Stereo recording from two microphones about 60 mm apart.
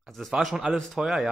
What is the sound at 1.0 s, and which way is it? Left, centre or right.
Speech, centre.